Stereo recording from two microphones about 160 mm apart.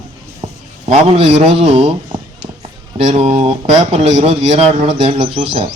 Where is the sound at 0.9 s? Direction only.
35° right (ahead or behind).